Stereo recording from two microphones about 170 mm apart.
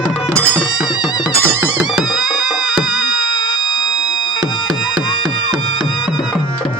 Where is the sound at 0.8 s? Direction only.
5° right (ahead or behind).